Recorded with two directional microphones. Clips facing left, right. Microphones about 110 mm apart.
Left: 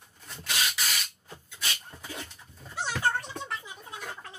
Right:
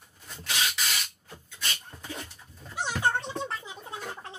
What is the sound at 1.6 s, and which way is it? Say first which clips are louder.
Dog: even; centre (ahead or behind).